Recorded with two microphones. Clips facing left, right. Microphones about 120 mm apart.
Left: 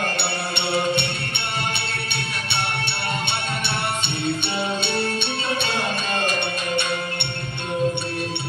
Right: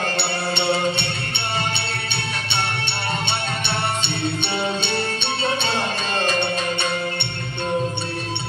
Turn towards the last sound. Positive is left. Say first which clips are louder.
# right 2 dB
turn(degrees=50)  # may be behind; listen again after turning